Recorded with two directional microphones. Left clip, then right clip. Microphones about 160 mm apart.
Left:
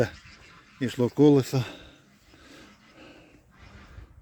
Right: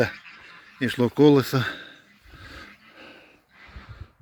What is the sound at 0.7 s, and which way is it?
Speech, 10° left (ahead or behind).